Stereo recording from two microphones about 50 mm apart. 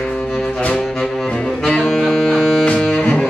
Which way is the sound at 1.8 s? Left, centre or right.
Centre.